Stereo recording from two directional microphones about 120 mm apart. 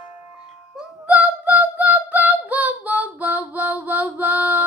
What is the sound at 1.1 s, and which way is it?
Singing, 10° right (ahead or behind).